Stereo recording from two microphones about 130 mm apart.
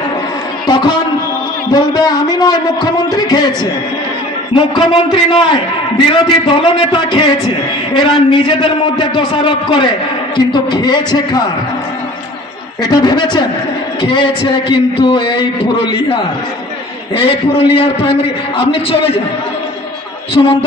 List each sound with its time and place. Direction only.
0.7 s a sound: 35° left (ahead or behind)
1.7 s a man's voice: 30° left (ahead or behind)
4.6 s a man's voice: 35° left (ahead or behind)
12.8 s a man's voice: 30° left (ahead or behind)
20.4 s a man's voice: 35° left (ahead or behind)